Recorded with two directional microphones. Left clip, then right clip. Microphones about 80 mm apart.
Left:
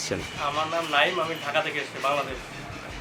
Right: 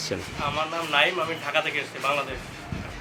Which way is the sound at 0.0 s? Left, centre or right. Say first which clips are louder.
Even; centre.